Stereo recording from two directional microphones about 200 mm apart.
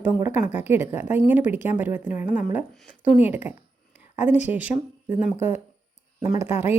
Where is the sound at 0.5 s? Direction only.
10° right (ahead or behind).